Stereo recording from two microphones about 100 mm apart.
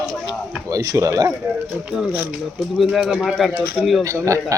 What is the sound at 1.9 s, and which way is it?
Speech, 10° right (ahead or behind).